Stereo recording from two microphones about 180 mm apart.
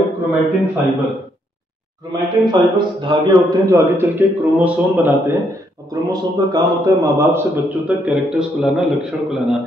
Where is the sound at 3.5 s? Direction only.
15° right (ahead or behind).